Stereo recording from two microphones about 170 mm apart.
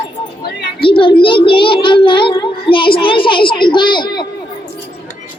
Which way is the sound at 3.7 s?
25° left (ahead or behind).